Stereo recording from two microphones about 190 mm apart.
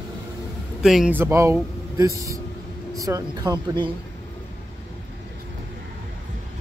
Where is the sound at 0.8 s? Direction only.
5° right (ahead or behind); by 3.8 s 20° right (ahead or behind).